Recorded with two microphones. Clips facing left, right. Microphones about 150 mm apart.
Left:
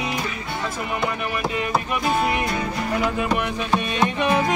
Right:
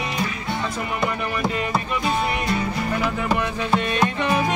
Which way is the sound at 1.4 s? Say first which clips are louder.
Even; centre (ahead or behind).